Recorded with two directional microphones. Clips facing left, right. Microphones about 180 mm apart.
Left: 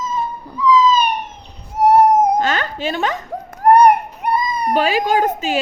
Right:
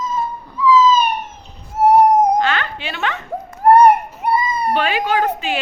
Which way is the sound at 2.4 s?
45° left (ahead or behind).